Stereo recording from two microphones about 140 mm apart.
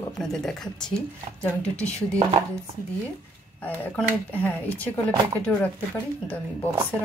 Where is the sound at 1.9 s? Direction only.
20° right (ahead or behind).